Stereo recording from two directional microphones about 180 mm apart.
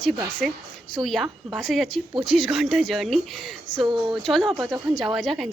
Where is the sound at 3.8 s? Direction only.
25° right (ahead or behind).